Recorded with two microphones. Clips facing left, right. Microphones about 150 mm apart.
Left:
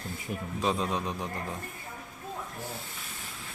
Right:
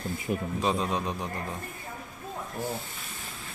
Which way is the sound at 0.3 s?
80° right.